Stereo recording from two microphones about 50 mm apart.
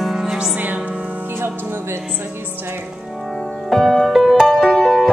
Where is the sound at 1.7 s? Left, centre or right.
Right.